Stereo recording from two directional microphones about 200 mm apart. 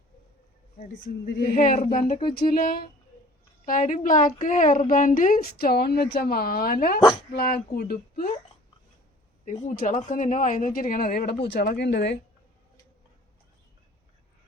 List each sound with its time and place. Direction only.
0.8 s a woman's voice: 45° left (ahead or behind)
9.4 s speech: 35° left (ahead or behind); by 12.2 s 55° left (ahead or behind)